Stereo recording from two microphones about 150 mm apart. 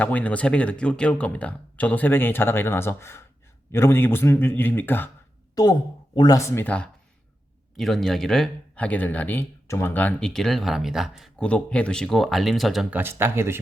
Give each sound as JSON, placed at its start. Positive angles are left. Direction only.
{"t": 0.0, "sound": "speech", "side_deg": 10}
{"t": 5.6, "sound": "speech", "side_deg": 25}
{"t": 13.0, "sound": "speech", "side_deg": -15}